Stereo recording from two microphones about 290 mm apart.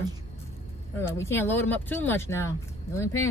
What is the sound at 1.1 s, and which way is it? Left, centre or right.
Speech, centre.